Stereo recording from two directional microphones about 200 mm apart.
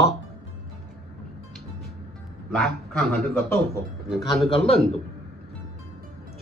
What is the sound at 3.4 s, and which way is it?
Speech, 10° left (ahead or behind).